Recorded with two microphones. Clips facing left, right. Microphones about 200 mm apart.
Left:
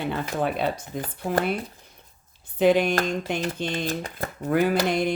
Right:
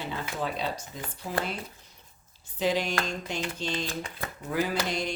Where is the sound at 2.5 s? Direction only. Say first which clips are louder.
Left 8 dB; 55° left (ahead or behind).